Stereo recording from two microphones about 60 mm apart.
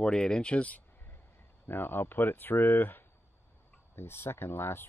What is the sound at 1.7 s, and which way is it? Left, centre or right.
Speech, left.